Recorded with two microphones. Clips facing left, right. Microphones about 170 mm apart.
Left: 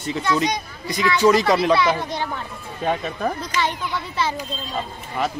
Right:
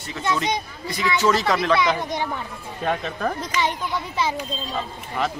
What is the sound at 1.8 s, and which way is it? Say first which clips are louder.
Speech: left 1 dB; 15° right (ahead or behind).